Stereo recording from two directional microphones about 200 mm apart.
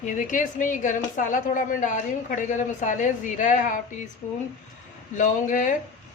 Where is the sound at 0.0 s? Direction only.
40° left (ahead or behind).